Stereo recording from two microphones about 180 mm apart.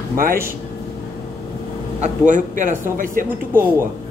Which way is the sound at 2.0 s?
45° right (ahead or behind).